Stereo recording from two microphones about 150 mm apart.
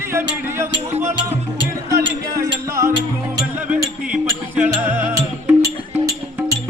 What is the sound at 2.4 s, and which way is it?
Music, 20° right (ahead or behind).